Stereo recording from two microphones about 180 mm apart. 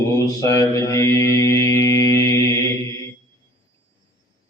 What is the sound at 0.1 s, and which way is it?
Mantra, 20° left (ahead or behind).